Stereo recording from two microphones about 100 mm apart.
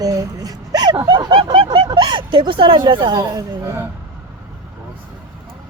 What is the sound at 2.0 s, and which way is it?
Speech, 55° right (ahead or behind).